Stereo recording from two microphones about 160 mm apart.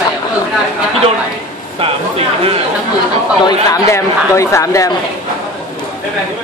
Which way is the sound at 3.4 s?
20° left (ahead or behind).